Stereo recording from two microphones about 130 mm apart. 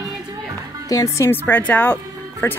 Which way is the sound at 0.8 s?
25° left (ahead or behind).